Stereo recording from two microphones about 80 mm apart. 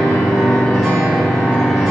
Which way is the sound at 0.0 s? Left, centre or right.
Centre.